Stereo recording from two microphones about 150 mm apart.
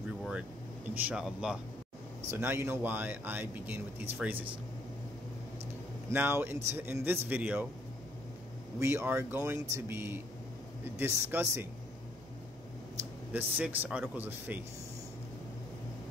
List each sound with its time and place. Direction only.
0.2 s speech: 10° right (ahead or behind)
2.3 s speech: 15° right (ahead or behind)
6.0 s speech: 15° right (ahead or behind)
8.7 s speech: 15° right (ahead or behind)
13.3 s speech: 10° right (ahead or behind)